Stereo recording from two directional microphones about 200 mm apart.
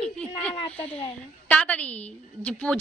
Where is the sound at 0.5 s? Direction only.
30° left (ahead or behind).